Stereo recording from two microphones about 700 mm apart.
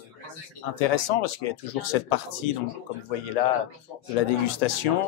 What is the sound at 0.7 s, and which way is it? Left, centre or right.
Speech, left.